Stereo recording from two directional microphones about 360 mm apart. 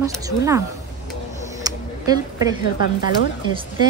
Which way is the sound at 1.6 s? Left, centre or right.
Centre.